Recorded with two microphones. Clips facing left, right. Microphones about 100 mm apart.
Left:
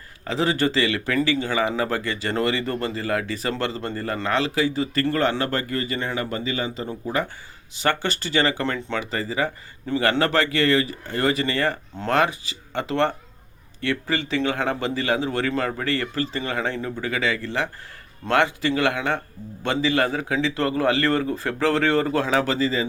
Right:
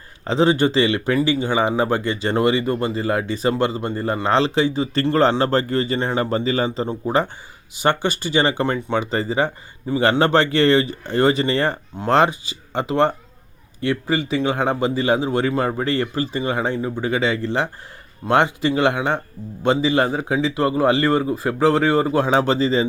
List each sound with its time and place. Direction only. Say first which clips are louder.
0.3 s a man's voice: right 5 dB; 25° right (ahead or behind)
7.8 s a man's voice: right 4 dB; 15° right (ahead or behind)